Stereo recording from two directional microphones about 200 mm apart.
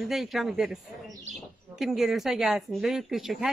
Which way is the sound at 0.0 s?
Centre (ahead or behind).